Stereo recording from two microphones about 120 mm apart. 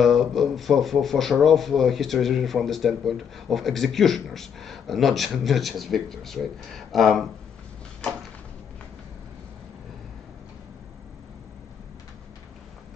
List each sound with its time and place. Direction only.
0.0 s speech: centre (ahead or behind)